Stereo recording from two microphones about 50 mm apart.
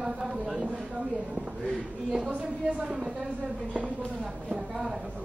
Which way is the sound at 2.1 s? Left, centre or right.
Centre.